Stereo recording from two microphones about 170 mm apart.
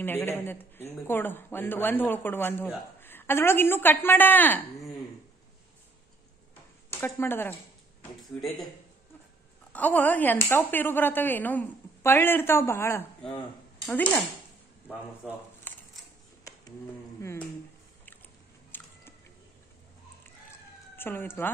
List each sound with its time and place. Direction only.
0.0 s speech: 15° left (ahead or behind)
6.9 s speech: 15° left (ahead or behind)
8.2 s speech: centre (ahead or behind)
9.7 s speech: 10° left (ahead or behind)
15.7 s a sound: 10° left (ahead or behind)
17.2 s music: 15° left (ahead or behind)
18.7 s chewing: 10° left (ahead or behind)
20.5 s a sound: 15° left (ahead or behind)